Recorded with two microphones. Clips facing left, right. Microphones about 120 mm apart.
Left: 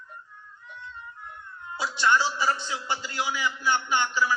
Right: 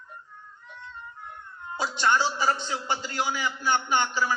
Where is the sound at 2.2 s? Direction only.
45° right (ahead or behind).